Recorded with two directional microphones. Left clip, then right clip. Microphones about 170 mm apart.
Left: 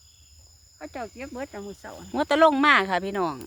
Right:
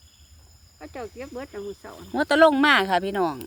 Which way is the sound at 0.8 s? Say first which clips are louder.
Even; 70° left (ahead or behind).